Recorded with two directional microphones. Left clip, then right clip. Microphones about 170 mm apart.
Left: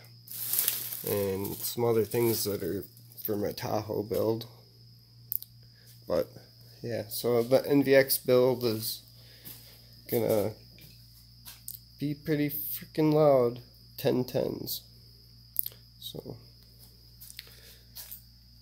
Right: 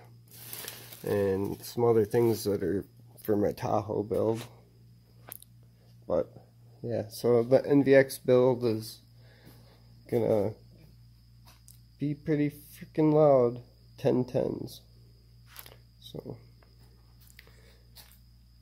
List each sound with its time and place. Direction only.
1.0 s speech: 20° right (ahead or behind)
6.9 s speech: 30° right (ahead or behind)
7.3 s speech: 15° right (ahead or behind)
10.0 s speech: 10° right (ahead or behind)
12.0 s speech: 10° right (ahead or behind)
15.6 s a sound: 10° right (ahead or behind)